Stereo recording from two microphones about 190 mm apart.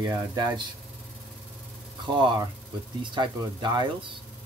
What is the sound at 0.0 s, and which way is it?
Speech, 20° right (ahead or behind).